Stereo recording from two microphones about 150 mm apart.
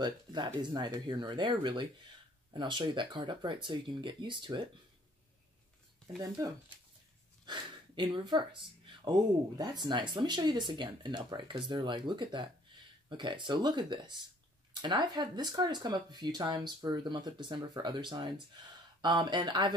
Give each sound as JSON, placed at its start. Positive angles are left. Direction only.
{"t": 0.0, "sound": "speech", "side_deg": -30}
{"t": 7.4, "sound": "speech", "side_deg": -30}